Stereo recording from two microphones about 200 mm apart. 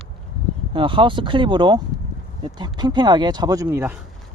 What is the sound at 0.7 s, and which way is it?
Speech, 25° right (ahead or behind).